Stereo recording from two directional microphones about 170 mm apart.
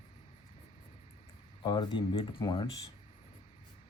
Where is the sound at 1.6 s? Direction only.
25° left (ahead or behind).